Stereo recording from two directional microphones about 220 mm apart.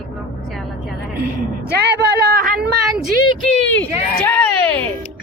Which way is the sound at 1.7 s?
50° right (ahead or behind).